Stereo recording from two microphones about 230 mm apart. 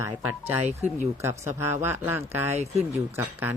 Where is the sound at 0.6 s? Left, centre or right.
Right.